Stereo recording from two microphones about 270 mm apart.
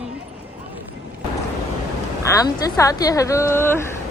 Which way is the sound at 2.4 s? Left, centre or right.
Centre.